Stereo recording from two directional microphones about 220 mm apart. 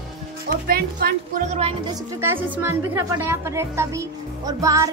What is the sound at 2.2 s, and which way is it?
Speech, 10° right (ahead or behind).